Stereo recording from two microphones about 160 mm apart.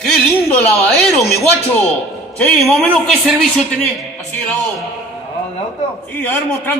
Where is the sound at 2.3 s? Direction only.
5° left (ahead or behind).